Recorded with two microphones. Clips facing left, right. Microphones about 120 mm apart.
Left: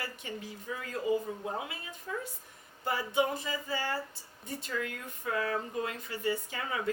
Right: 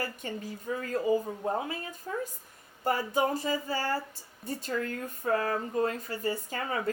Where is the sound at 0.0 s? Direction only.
45° right (ahead or behind).